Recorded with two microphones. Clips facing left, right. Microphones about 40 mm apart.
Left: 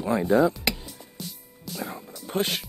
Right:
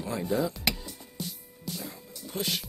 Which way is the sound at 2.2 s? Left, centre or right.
Left.